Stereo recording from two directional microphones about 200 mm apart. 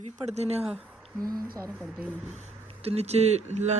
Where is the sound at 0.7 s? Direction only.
5° right (ahead or behind).